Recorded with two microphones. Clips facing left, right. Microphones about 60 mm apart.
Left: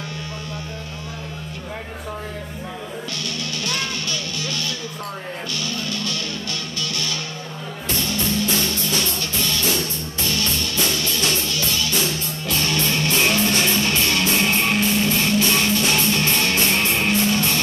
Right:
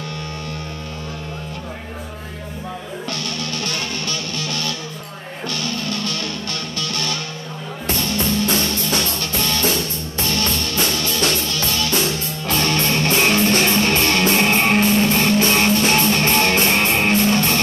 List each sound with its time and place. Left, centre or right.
3.1 s music: right